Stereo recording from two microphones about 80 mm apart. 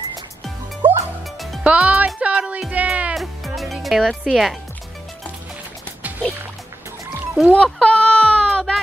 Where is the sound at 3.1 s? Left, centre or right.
Centre.